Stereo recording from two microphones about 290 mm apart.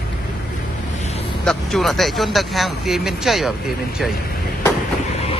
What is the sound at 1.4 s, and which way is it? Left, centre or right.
Speech, centre.